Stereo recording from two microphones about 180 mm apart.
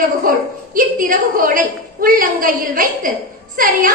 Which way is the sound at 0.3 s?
50° right (ahead or behind).